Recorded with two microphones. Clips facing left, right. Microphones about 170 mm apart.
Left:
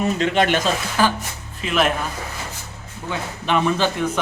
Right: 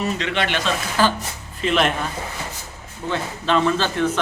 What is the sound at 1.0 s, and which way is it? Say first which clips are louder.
Speech: even; 15° left (ahead or behind).